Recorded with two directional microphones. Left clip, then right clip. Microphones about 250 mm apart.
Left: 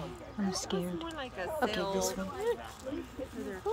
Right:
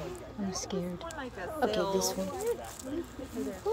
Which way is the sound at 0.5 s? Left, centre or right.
Centre.